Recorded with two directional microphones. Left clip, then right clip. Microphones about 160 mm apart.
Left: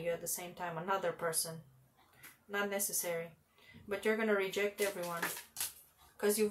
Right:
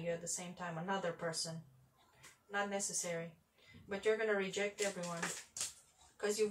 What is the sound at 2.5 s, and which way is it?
Speech, 40° left (ahead or behind).